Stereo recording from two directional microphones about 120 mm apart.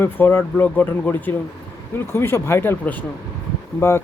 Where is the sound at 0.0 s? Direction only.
20° left (ahead or behind).